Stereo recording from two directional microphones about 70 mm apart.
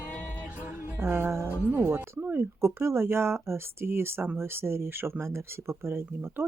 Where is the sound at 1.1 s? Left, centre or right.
Right.